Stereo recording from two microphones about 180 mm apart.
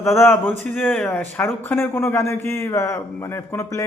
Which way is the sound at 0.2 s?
10° left (ahead or behind).